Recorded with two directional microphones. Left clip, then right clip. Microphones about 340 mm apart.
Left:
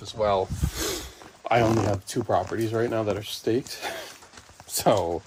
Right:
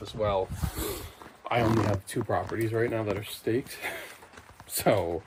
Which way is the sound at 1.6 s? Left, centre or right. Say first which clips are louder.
Left 3 dB; centre.